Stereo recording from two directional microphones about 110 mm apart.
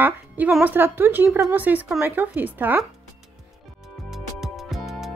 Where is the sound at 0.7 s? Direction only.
20° right (ahead or behind).